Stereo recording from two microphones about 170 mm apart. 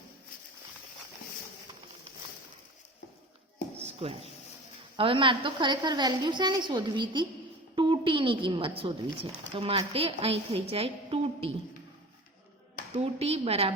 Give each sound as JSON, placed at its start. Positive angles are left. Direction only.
{"t": 3.8, "sound": "a sound", "side_deg": -35}
{"t": 4.9, "sound": "a woman's voice", "side_deg": -30}
{"t": 13.0, "sound": "a woman's voice", "side_deg": -35}